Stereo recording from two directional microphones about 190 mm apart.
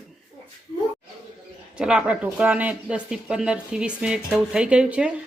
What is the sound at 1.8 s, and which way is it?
Speech, 5° right (ahead or behind).